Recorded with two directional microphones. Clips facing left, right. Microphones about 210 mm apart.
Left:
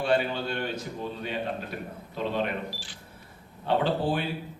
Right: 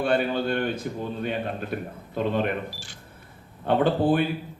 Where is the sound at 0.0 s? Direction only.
55° right (ahead or behind).